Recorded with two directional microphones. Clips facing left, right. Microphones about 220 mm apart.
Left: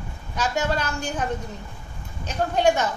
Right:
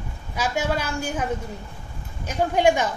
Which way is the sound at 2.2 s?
10° right (ahead or behind).